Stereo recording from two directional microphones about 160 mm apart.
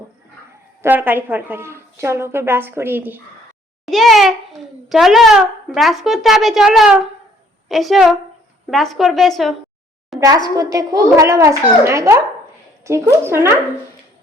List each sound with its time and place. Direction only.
0.8 s a woman's voice: 10° right (ahead or behind)
3.8 s a child's voice: centre (ahead or behind)
10.2 s a child's voice: 20° right (ahead or behind)